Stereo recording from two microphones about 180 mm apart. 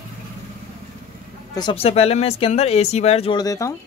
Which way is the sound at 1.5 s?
25° left (ahead or behind).